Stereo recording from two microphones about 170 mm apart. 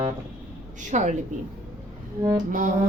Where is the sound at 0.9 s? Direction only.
45° right (ahead or behind).